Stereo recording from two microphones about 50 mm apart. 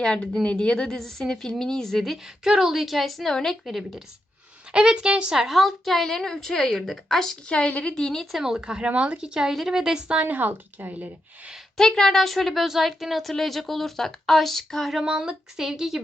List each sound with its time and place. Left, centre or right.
0.0 s a woman's voice: centre
0.9 s a woman's voice: centre
2.4 s a woman's voice: centre
4.7 s a woman's voice: centre
5.3 s a woman's voice: centre
7.6 s a woman's voice: left
8.4 s speech: centre
8.9 s a woman's voice: right
9.1 s speech: centre
10.2 s speech: right
11.8 s a woman's voice: centre
15.0 s speech: centre